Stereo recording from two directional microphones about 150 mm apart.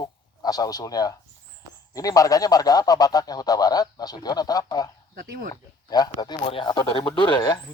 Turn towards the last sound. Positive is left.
turn(degrees=30)  # may be behind; listen again after turning